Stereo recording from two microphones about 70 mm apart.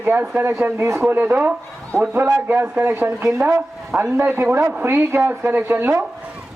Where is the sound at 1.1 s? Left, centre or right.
Right.